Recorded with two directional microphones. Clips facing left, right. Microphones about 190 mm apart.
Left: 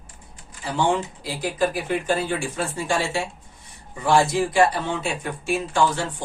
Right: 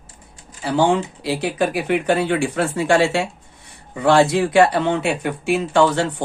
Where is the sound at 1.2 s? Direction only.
70° right (ahead or behind).